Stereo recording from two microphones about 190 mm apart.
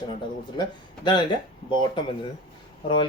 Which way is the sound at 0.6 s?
25° left (ahead or behind).